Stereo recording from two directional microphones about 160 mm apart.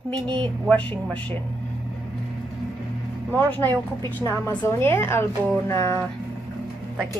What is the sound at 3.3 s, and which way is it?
A woman's voice, 10° left (ahead or behind).